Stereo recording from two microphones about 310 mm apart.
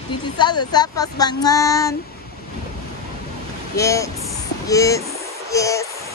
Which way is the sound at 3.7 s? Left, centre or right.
Centre.